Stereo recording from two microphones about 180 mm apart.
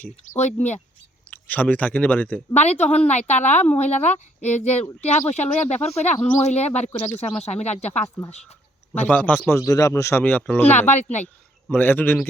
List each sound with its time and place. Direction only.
0.3 s speech: 40° left (ahead or behind)
1.3 s a man's voice: 10° left (ahead or behind)
2.6 s speech: 40° left (ahead or behind)
9.0 s a man's voice: 10° left (ahead or behind)
10.9 s speech: 40° left (ahead or behind)
11.7 s a man's voice: 10° left (ahead or behind)